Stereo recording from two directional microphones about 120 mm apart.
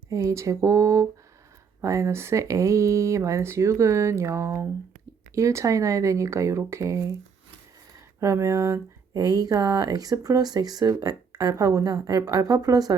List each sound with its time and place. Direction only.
0.1 s speech: 25° right (ahead or behind)